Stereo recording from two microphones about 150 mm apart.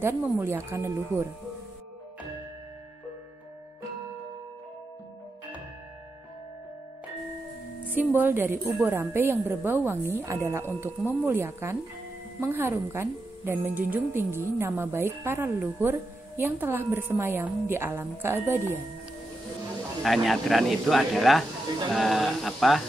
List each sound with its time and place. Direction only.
0.0 s a woman's voice: 15° right (ahead or behind)
7.9 s a woman's voice: 10° right (ahead or behind)
20.0 s speech: centre (ahead or behind)